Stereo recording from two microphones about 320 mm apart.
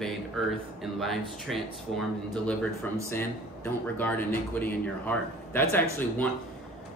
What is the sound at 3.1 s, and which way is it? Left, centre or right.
Speech, centre.